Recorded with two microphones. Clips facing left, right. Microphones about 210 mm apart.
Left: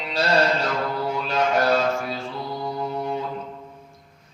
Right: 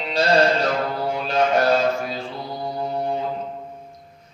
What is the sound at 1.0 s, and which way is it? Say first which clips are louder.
Mantra: right 4 dB; 45° right (ahead or behind).